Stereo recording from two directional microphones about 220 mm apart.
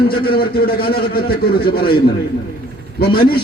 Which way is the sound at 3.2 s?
45° left (ahead or behind).